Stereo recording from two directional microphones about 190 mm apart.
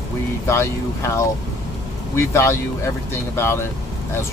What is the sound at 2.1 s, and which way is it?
Speech, 15° left (ahead or behind).